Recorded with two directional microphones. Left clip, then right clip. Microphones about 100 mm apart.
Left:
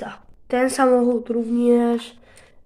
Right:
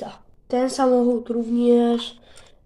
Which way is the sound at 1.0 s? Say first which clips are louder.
Left 1 dB; 15° right (ahead or behind).